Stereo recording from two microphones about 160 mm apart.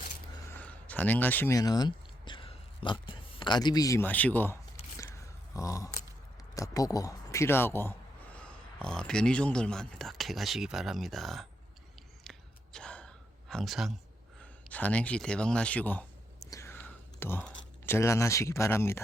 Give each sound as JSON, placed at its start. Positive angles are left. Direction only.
{"t": 0.5, "sound": "a sound", "side_deg": 10}
{"t": 1.5, "sound": "speech", "side_deg": 25}
{"t": 4.9, "sound": "a sound", "side_deg": 20}
{"t": 6.5, "sound": "speech", "side_deg": 20}
{"t": 12.2, "sound": "gasp", "side_deg": 5}
{"t": 14.7, "sound": "speech", "side_deg": 10}
{"t": 16.4, "sound": "whispering", "side_deg": 20}